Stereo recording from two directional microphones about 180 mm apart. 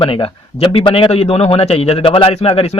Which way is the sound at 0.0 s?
30° left (ahead or behind).